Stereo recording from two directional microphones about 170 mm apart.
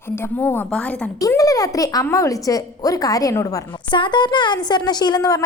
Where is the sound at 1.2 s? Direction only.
20° left (ahead or behind).